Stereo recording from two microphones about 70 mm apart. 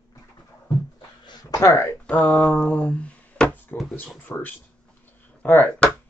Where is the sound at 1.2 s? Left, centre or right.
Left.